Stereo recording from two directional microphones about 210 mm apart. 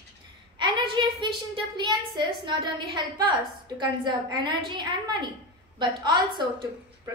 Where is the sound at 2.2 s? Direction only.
20° right (ahead or behind).